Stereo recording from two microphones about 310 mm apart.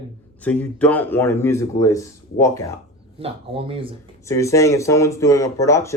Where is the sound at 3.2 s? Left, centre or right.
Centre.